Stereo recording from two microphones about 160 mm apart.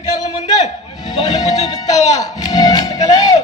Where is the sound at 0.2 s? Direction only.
25° left (ahead or behind).